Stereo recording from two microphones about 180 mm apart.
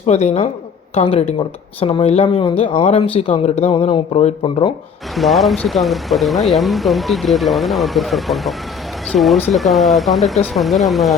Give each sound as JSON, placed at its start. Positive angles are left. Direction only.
{"t": 0.0, "sound": "speech", "side_deg": 35}
{"t": 5.1, "sound": "speech", "side_deg": 0}